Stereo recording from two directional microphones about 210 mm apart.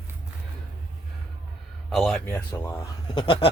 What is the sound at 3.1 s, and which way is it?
Goat, 25° left (ahead or behind).